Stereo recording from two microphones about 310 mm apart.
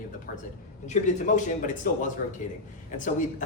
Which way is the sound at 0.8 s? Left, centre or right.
Left.